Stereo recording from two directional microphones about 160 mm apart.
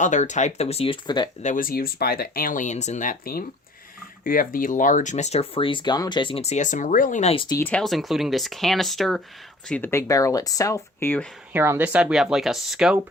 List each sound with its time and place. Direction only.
0.0 s speech: 50° left (ahead or behind); by 1.3 s 30° left (ahead or behind)
1.4 s speech: 55° left (ahead or behind)
7.4 s speech: 20° left (ahead or behind)
7.7 s speech: centre (ahead or behind)
11.5 s speech: 15° right (ahead or behind)